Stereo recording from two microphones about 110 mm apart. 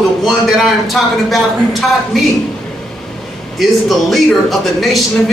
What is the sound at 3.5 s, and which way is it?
A man's voice, centre (ahead or behind).